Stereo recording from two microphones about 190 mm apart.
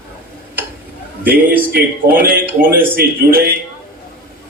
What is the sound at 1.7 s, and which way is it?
A man's voice, 50° right (ahead or behind).